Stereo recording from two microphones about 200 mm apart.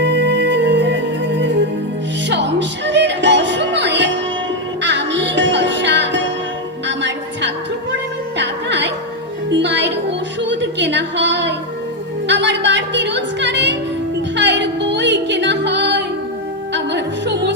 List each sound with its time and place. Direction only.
0.0 s music: 60° right (ahead or behind)